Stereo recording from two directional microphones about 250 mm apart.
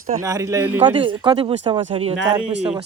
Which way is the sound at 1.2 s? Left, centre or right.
Right.